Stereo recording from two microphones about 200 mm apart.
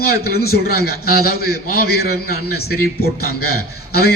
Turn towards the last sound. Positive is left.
turn(degrees=50)  # may be behind; listen again after turning